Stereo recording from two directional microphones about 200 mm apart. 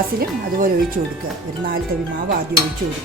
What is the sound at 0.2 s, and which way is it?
Speech, 45° right (ahead or behind).